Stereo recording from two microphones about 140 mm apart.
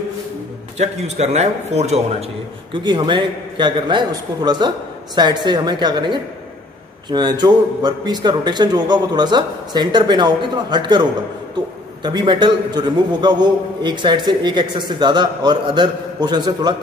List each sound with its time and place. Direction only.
0.7 s a man's voice: 50° right (ahead or behind)
2.7 s a man's voice: 35° right (ahead or behind)